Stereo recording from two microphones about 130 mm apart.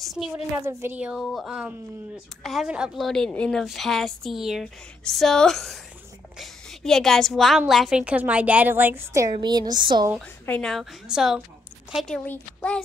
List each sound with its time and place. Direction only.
0.0 s a woman's voice: centre (ahead or behind)
0.7 s a woman's voice: 20° right (ahead or behind)
0.9 s a woman's voice: 10° right (ahead or behind)
3.1 s a woman's voice: 5° left (ahead or behind); by 9.3 s 20° right (ahead or behind)
9.3 s speech: 35° right (ahead or behind)
10.4 s a woman's voice: 10° left (ahead or behind)